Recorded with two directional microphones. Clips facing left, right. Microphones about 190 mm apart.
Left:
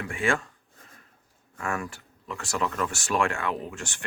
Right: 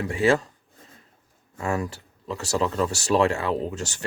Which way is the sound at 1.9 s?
30° right (ahead or behind).